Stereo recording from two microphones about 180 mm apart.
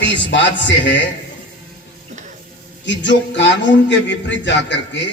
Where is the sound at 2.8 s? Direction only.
90° left.